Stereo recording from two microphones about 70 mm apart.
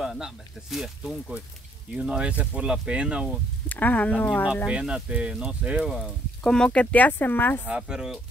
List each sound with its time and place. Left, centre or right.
0.0 s speech: centre
3.6 s speech: left
4.6 s speech: centre
5.9 s speech: centre; by 7.6 s left
7.6 s speech: centre